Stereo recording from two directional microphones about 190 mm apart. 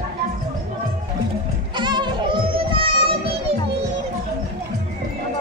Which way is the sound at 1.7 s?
25° right (ahead or behind).